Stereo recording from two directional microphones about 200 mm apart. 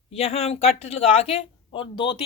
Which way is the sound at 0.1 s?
30° left (ahead or behind).